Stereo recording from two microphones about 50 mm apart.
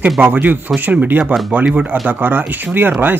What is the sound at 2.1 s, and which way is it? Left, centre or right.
Speech, right.